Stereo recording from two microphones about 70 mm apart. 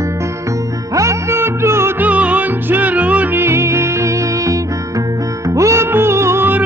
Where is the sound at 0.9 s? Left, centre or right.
Right.